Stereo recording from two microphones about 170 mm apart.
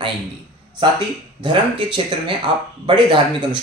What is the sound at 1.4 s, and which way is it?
Speech, 30° right (ahead or behind).